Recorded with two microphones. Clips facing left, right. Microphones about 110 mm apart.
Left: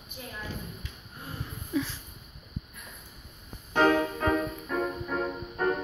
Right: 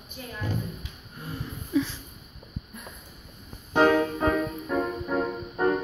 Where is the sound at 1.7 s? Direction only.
5° left (ahead or behind).